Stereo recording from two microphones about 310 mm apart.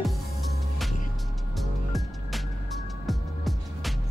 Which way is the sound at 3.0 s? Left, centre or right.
Centre.